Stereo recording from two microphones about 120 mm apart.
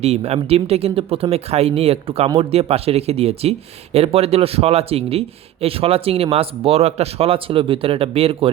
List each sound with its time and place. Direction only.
0.0 s speech: 60° right (ahead or behind)